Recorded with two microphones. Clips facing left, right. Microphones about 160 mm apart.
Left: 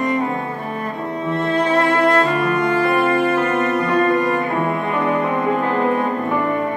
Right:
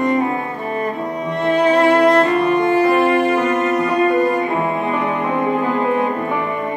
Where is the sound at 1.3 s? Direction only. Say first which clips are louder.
Right 3 dB; 15° right (ahead or behind).